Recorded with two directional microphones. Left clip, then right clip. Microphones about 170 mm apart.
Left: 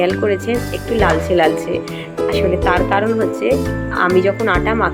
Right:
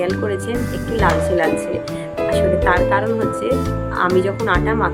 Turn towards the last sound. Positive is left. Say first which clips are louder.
# left 2 dB
turn(degrees=10)  # may be behind; listen again after turning